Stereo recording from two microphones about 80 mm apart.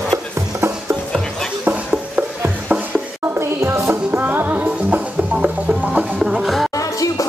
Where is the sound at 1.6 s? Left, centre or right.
Centre.